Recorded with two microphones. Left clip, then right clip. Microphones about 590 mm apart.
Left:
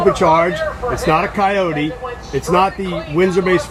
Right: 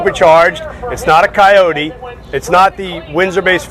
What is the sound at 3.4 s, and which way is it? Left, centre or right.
Speech, right.